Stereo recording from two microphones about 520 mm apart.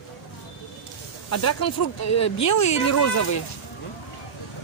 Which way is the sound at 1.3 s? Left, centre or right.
Left.